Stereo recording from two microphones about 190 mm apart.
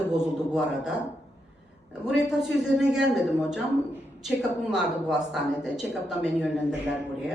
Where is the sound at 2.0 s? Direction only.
Centre (ahead or behind).